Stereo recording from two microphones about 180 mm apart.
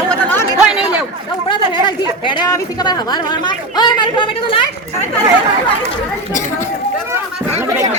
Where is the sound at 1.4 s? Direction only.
25° left (ahead or behind).